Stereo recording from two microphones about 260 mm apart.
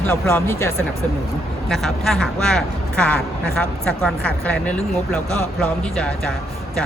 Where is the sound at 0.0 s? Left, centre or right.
Centre.